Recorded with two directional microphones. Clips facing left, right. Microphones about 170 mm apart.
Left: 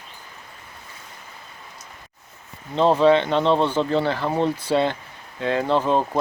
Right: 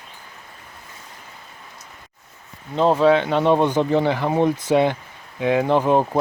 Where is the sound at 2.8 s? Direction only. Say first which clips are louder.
Even; 5° right (ahead or behind).